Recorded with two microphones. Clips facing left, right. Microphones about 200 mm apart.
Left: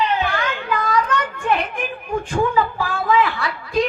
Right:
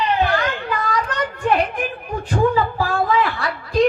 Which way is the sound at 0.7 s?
35° right (ahead or behind).